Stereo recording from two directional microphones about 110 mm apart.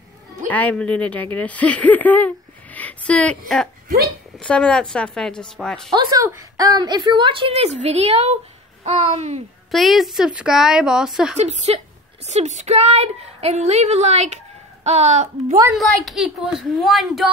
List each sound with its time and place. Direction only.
0.5 s a woman's voice: 15° left (ahead or behind)
5.9 s a woman's voice: 35° right (ahead or behind); by 8.4 s 70° right (ahead or behind)
8.8 s a woman's voice: 85° right
9.7 s a woman's voice: centre (ahead or behind)
11.3 s a woman's voice: 80° right
15.7 s a woman's voice: centre (ahead or behind)